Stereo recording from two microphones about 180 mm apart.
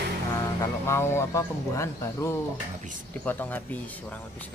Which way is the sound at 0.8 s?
15° left (ahead or behind).